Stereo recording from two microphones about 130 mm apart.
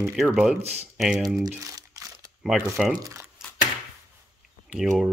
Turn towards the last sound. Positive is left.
turn(degrees=-5)  # may be behind; listen again after turning